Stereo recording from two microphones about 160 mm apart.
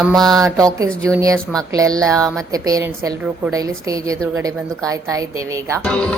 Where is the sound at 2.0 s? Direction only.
5° left (ahead or behind).